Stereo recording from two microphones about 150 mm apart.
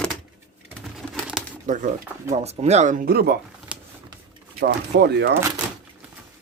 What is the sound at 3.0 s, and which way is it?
Speech, 90° right.